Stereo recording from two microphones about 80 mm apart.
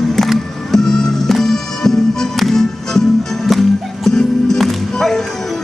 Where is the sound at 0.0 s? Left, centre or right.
Centre.